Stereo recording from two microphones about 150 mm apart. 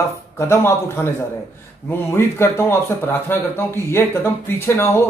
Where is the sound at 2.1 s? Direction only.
15° left (ahead or behind).